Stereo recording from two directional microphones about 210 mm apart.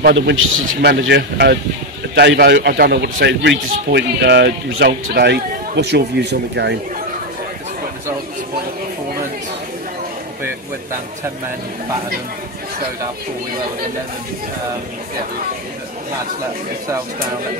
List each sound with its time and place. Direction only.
0.1 s a man's voice: 65° right (ahead or behind)